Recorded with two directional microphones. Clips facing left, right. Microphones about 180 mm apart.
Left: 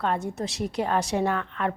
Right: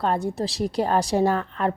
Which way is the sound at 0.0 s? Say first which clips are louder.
Right 3 dB; 35° right (ahead or behind).